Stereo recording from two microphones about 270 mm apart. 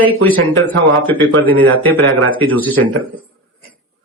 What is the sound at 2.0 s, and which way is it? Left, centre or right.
Speech, right.